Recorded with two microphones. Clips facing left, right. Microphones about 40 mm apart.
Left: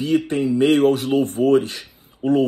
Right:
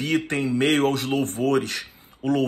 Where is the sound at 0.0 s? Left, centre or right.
Right.